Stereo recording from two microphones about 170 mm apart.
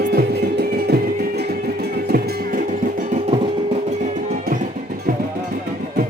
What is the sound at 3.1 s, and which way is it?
Music, 35° right (ahead or behind).